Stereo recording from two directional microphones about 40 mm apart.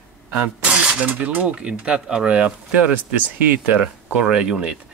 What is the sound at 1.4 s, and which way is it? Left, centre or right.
Speech, right.